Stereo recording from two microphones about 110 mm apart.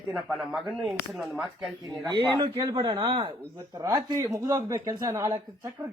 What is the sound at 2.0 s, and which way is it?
Speech, 40° right (ahead or behind).